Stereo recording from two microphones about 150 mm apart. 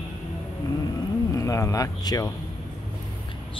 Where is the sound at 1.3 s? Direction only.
20° left (ahead or behind).